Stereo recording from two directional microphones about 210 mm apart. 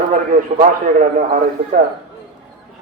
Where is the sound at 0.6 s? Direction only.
40° right (ahead or behind).